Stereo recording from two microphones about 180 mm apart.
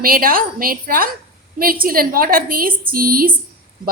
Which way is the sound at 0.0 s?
55° right (ahead or behind).